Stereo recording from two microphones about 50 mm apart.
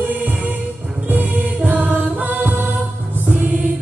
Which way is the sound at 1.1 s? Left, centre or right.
Right.